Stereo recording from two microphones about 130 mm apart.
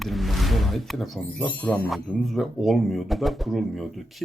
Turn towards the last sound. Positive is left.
turn(degrees=0)  # may be behind; listen again after turning